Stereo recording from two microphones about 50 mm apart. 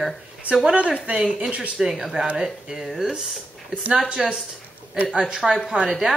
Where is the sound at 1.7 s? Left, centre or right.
Centre.